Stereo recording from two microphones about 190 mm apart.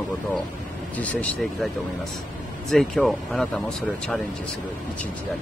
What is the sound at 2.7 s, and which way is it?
Speech, centre (ahead or behind).